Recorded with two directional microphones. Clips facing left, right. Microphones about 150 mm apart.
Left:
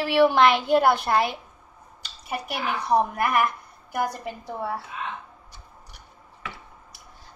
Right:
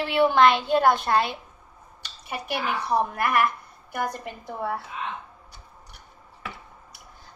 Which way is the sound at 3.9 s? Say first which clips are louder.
Left 2 dB; 10° left (ahead or behind).